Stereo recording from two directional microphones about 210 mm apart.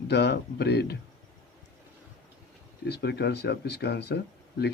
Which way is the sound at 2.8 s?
50° left (ahead or behind).